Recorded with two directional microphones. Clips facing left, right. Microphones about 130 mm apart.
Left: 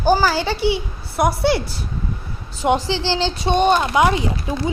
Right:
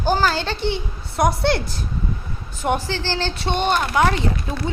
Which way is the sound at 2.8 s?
15° left (ahead or behind).